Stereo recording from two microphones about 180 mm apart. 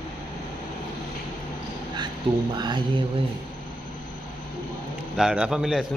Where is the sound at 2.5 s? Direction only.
25° right (ahead or behind).